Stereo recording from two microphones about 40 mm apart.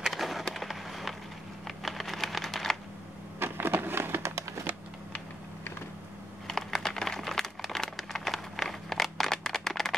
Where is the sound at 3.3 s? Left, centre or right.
Right.